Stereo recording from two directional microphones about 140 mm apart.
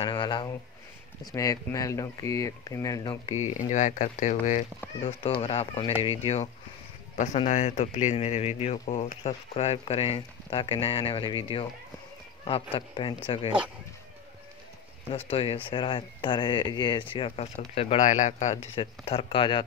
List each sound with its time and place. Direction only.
0.0 s speech: 35° left (ahead or behind)
1.2 s speech: 25° left (ahead or behind)
3.5 s speech: 60° left (ahead or behind)
5.0 s speech: 45° left (ahead or behind)
12.4 s speech: 40° left (ahead or behind)
15.2 s speech: 40° left (ahead or behind)
18.0 s speech: 65° left (ahead or behind)
18.8 s speech: 40° left (ahead or behind)